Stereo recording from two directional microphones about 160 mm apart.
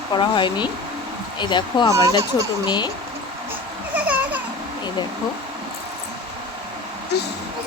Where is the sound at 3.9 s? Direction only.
10° right (ahead or behind).